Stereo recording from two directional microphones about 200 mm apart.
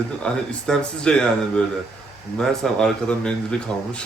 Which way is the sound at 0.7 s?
5° left (ahead or behind).